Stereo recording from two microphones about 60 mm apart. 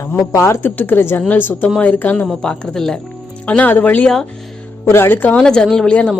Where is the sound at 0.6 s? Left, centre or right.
Left.